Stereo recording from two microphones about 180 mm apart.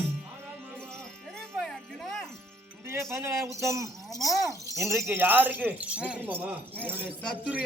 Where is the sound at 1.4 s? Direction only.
Centre (ahead or behind).